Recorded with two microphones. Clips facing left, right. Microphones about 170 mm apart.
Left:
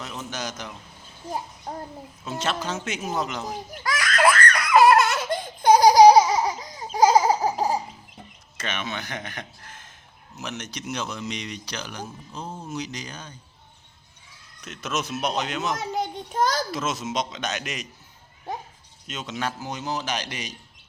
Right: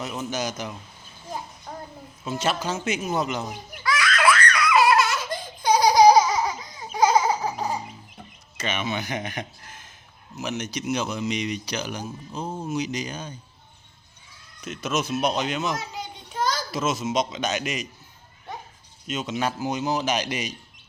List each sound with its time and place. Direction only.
0.0 s speech: 10° right (ahead or behind)
2.2 s a man's voice: 5° right (ahead or behind)
3.7 s baby laughter: 45° left (ahead or behind)
5.9 s baby laughter: 35° left (ahead or behind)
8.5 s speech: 5° right (ahead or behind)
14.6 s a man's voice: centre (ahead or behind)
15.8 s a sound: 50° left (ahead or behind)
16.7 s a man's voice: centre (ahead or behind)
19.0 s speech: 5° right (ahead or behind)